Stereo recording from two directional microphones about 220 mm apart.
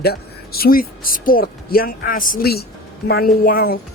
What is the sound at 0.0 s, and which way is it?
Speech, 45° left (ahead or behind).